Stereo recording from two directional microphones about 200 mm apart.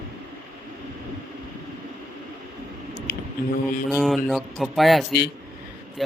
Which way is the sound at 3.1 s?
55° left (ahead or behind).